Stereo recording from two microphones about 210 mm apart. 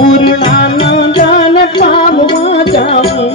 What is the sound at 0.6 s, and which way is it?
Music, 50° left (ahead or behind).